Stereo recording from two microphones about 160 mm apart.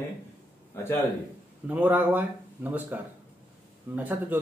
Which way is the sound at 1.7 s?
10° right (ahead or behind).